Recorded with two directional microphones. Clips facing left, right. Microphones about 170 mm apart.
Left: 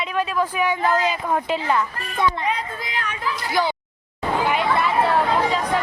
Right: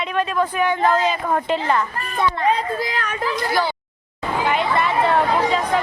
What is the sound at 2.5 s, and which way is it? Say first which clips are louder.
Speech: right 6 dB; 35° right (ahead or behind).